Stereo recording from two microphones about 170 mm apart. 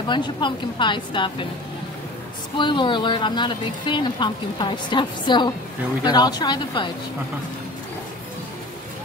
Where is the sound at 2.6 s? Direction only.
30° left (ahead or behind).